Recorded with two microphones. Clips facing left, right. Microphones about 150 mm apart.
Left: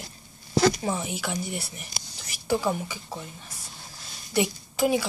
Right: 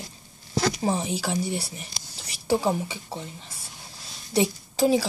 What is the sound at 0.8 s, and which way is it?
A woman's voice, 30° right (ahead or behind).